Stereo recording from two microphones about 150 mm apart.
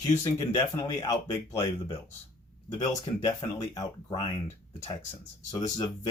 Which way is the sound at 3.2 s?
25° left (ahead or behind).